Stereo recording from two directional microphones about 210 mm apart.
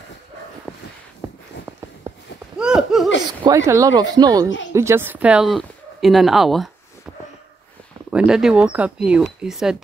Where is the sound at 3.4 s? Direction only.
15° right (ahead or behind).